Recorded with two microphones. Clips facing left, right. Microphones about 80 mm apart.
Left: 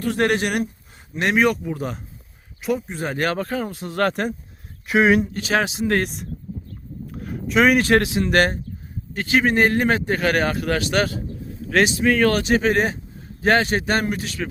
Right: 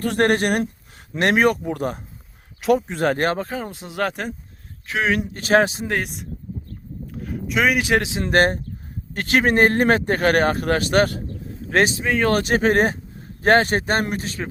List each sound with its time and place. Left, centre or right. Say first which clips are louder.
0.0 s a man's voice: right 2 dB; right
2.6 s speech: right 5 dB; right
3.3 s speech: left 2 dB; centre
3.9 s speech: left 3 dB; centre
4.9 s speech: left 5 dB; centre
5.4 s speech: right 4 dB; right
6.0 s speech: left 3 dB; centre
8.2 s speech: right 1 dB; right
9.1 s a man's voice: right 1 dB; right
11.7 s speech: even; right
12.0 s speech: left 3 dB; centre
12.3 s a man's voice: right 1 dB; right